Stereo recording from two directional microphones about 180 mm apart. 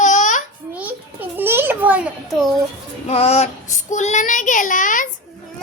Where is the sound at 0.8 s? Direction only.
10° right (ahead or behind).